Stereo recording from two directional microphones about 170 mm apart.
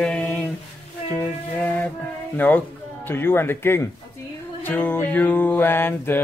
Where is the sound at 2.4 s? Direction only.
10° left (ahead or behind).